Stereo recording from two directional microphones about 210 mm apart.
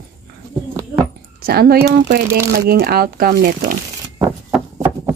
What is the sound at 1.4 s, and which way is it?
Speech, 45° right (ahead or behind).